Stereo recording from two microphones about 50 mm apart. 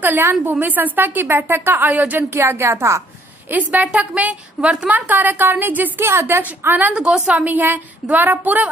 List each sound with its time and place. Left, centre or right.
0.0 s a woman's voice: right
2.2 s speech: right
3.4 s a woman's voice: right
4.9 s a woman's voice: right
6.0 s a woman's voice: right
6.9 s a woman's voice: centre
7.2 s a woman's voice: right